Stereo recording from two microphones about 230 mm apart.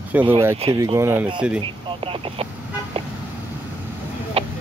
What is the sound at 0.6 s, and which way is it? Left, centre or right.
Speech, right.